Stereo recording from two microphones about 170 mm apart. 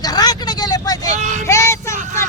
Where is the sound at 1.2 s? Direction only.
45° right (ahead or behind).